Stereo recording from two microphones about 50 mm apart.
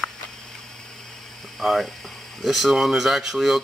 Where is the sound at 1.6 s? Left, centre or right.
Centre.